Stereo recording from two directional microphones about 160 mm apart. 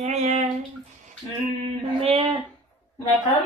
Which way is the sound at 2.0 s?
40° right (ahead or behind).